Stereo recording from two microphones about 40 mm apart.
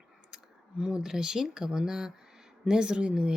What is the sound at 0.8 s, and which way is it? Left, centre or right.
A woman's voice, right.